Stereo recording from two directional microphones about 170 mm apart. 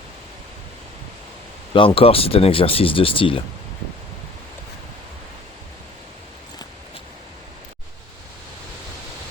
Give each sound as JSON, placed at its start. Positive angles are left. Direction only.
{"t": 1.7, "sound": "speech", "side_deg": 30}